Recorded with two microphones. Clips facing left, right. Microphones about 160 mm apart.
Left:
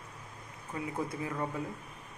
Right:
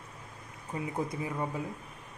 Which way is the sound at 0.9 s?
15° right (ahead or behind).